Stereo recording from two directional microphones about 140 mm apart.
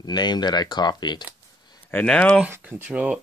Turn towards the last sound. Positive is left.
turn(degrees=-10)  # may be behind; listen again after turning